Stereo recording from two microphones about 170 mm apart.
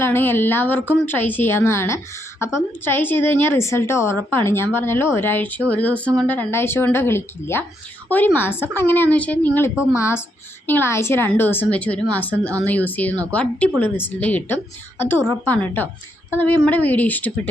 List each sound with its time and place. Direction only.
0.0 s a woman's voice: 15° left (ahead or behind)